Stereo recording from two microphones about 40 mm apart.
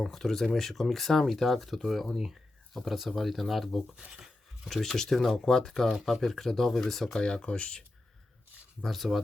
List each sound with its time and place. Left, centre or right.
0.0 s speech: centre
7.2 s speech: left
8.8 s speech: centre